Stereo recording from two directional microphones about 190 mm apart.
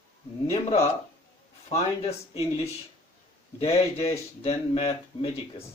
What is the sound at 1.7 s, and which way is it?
Speech, 35° left (ahead or behind).